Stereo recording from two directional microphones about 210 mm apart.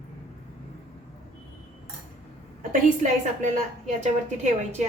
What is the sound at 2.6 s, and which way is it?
A woman's voice, 35° right (ahead or behind).